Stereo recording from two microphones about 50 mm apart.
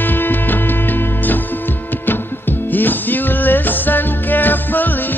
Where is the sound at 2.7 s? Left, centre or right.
Left.